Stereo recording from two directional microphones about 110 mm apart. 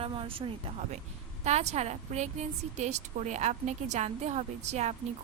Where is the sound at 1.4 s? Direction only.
90° right.